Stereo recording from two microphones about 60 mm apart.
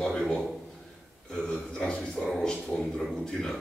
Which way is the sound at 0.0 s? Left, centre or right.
Centre.